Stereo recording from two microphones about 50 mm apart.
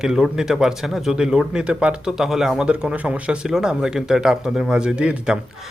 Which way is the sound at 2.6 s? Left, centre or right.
Centre.